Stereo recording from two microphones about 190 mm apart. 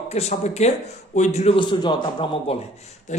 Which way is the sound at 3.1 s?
40° left (ahead or behind).